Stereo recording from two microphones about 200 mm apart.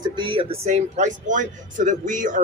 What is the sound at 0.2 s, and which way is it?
Speech, 25° right (ahead or behind).